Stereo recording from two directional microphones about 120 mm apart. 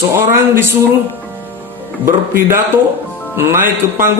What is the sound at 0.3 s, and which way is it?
Speech, 20° right (ahead or behind).